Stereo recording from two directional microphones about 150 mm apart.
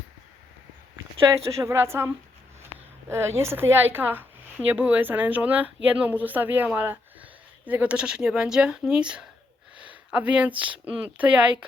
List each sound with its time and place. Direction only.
1.5 s speech: 20° right (ahead or behind)
3.1 s speech: 15° right (ahead or behind)
9.7 s a sound: 10° right (ahead or behind)
10.6 s speech: 10° right (ahead or behind)